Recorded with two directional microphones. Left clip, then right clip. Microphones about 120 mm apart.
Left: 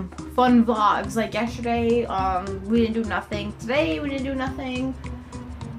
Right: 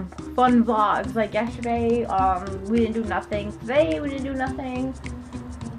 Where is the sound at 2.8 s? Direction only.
15° left (ahead or behind).